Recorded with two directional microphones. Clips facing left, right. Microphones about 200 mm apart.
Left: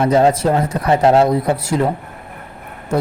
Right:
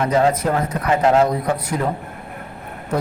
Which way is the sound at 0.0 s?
30° left (ahead or behind).